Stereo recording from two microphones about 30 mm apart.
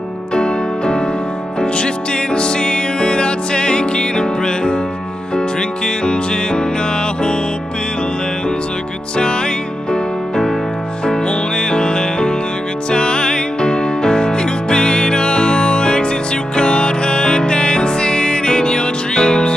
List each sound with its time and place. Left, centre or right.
0.3 s music: left
2.3 s music: left
11.1 s music: left